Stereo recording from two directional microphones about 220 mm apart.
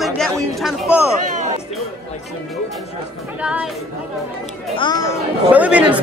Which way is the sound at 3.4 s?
5° right (ahead or behind).